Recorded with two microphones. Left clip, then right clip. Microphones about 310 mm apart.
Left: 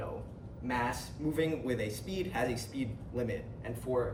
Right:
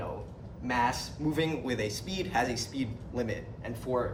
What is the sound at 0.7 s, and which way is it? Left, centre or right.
A man's voice, right.